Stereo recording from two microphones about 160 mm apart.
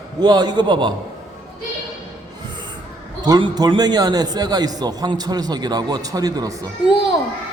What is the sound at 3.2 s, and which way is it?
A man's voice, 25° right (ahead or behind).